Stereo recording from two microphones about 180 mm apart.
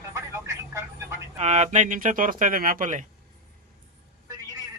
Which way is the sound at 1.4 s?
40° right (ahead or behind).